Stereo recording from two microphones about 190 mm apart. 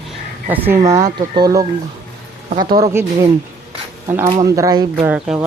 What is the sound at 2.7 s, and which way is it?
Speech, 15° right (ahead or behind).